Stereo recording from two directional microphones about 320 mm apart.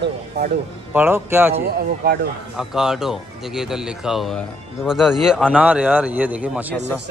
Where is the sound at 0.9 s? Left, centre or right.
Centre.